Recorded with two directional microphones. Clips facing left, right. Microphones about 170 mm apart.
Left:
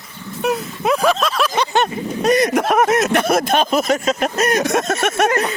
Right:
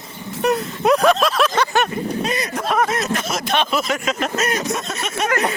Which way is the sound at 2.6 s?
55° left (ahead or behind).